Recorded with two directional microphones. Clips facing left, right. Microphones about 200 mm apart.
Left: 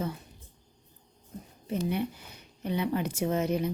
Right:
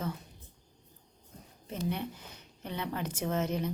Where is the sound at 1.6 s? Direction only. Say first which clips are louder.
Left 5 dB; 10° left (ahead or behind).